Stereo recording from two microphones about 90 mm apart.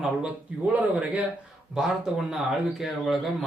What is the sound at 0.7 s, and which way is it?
Speech, 15° right (ahead or behind).